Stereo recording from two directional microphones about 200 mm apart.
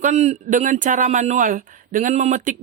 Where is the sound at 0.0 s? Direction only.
35° right (ahead or behind).